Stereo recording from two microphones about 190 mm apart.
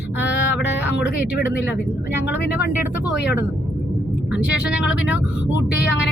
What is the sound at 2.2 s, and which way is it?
Speech, 65° left (ahead or behind).